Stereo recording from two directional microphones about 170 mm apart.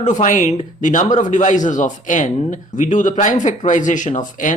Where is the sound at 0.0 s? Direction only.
45° left (ahead or behind).